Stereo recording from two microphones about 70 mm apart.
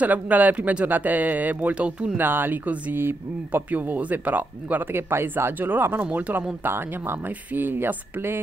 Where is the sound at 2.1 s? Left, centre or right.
Right.